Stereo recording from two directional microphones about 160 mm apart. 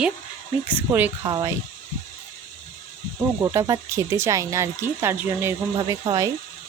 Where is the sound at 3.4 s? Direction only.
20° right (ahead or behind).